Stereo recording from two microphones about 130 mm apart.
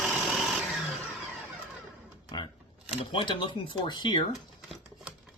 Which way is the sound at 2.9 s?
45° left (ahead or behind).